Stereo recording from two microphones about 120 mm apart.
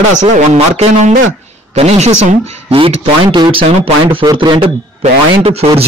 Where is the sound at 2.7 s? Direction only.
50° right (ahead or behind).